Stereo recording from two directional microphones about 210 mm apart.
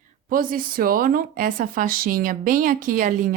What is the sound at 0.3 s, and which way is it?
Speech, 45° right (ahead or behind).